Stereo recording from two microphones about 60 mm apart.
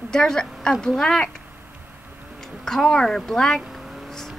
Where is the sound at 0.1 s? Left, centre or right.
Centre.